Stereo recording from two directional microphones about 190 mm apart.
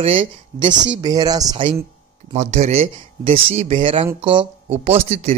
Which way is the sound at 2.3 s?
35° right (ahead or behind).